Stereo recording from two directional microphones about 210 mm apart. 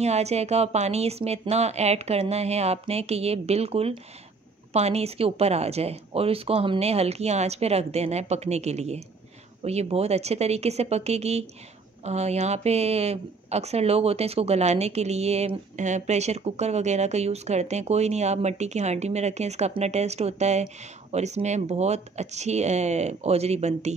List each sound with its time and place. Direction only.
0.0 s speech: 30° right (ahead or behind)